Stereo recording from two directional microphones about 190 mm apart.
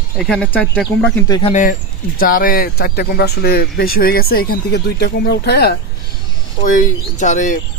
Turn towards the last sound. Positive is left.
turn(degrees=40)  # may be behind; listen again after turning